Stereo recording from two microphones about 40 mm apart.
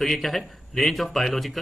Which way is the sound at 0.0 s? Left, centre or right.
Centre.